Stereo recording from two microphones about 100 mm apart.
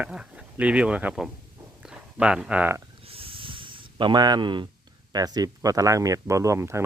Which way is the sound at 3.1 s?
65° right (ahead or behind).